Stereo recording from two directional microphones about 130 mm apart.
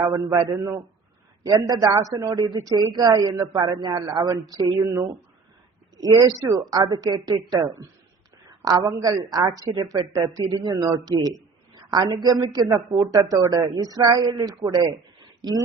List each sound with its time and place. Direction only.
0.0 s a man's voice: 25° right (ahead or behind)